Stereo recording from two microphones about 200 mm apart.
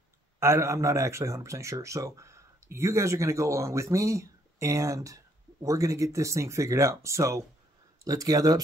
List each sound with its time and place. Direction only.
0.4 s speech: 15° right (ahead or behind)